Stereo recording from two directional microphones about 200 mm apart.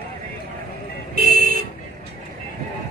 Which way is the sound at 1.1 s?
45° right (ahead or behind).